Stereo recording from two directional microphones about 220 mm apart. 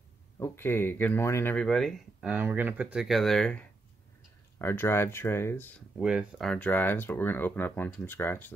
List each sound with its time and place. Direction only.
0.4 s speech: 10° left (ahead or behind)
5.9 s speech: 5° right (ahead or behind)